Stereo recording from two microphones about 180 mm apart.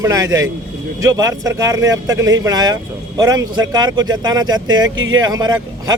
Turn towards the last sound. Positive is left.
turn(degrees=-20)  # may be behind; listen again after turning